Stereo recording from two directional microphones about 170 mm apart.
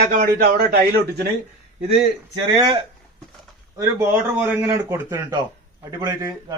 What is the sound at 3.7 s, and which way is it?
A man's voice, 15° right (ahead or behind).